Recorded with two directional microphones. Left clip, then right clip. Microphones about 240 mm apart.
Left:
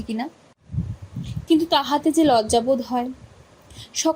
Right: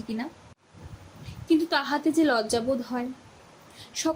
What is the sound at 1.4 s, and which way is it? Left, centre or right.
A woman's voice, left.